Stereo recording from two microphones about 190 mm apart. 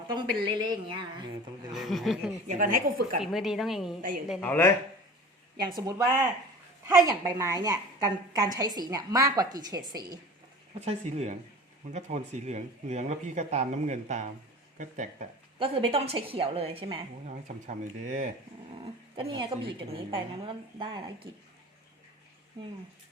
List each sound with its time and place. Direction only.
0.4 s a woman's voice: 20° right (ahead or behind)
1.7 s a woman's voice: centre (ahead or behind)
2.5 s a woman's voice: 45° right (ahead or behind)
3.2 s a woman's voice: centre (ahead or behind)
4.4 s speech: 10° left (ahead or behind)
5.6 s a woman's voice: 20° right (ahead or behind)
10.8 s speech: 35° right (ahead or behind)
15.5 s a woman's voice: 30° right (ahead or behind)
17.7 s speech: 40° right (ahead or behind)
19.3 s a woman's voice: 25° right (ahead or behind)